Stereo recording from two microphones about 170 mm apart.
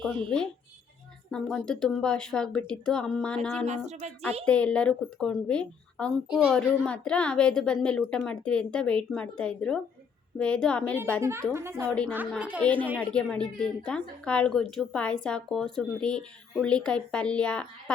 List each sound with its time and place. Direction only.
1.3 s a woman's voice: 5° left (ahead or behind)
3.8 s speech: 40° right (ahead or behind)
4.4 s a woman's voice: 5° left (ahead or behind)
11.2 s a woman's voice: 15° right (ahead or behind)
11.9 s a woman's voice: 5° left (ahead or behind)
12.4 s a woman's voice: 10° right (ahead or behind)
12.6 s a woman's voice: 10° left (ahead or behind)